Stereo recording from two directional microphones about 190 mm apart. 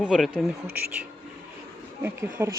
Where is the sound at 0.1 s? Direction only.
Centre (ahead or behind).